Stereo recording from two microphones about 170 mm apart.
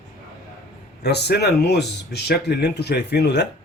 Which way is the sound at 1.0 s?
75° left (ahead or behind).